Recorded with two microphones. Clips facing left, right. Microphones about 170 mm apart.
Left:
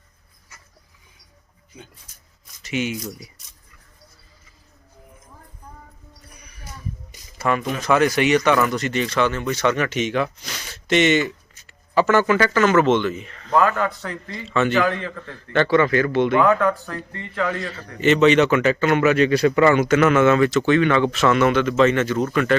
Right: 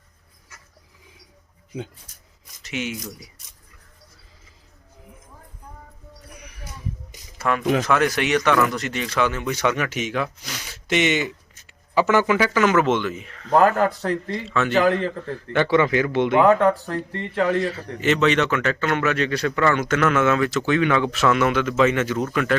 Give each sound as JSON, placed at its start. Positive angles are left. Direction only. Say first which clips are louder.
{"t": 2.6, "sound": "speech", "louder": "left 4 dB", "side_deg": 0}
{"t": 7.3, "sound": "speech", "louder": "right 2 dB", "side_deg": 0}
{"t": 13.5, "sound": "a man's voice", "louder": "right 2 dB", "side_deg": -45}
{"t": 14.4, "sound": "a man's voice", "louder": "left 5 dB", "side_deg": 0}
{"t": 14.7, "sound": "a man's voice", "louder": "right 2 dB", "side_deg": -35}
{"t": 15.5, "sound": "speech", "louder": "left 1 dB", "side_deg": -15}
{"t": 16.5, "sound": "a man's voice", "louder": "right 2 dB", "side_deg": -30}
{"t": 17.7, "sound": "a man's voice", "louder": "left 4 dB", "side_deg": 0}